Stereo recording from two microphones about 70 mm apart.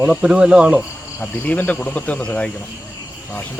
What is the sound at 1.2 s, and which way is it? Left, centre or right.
Speech, left.